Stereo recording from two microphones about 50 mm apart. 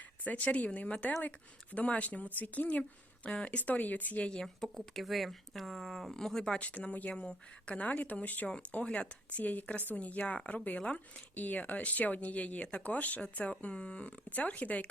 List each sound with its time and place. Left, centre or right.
0.3 s speech: left
4.4 s speech: centre
6.1 s speech: centre
6.6 s speech: left
8.8 s speech: left
9.4 s speech: left
11.3 s speech: left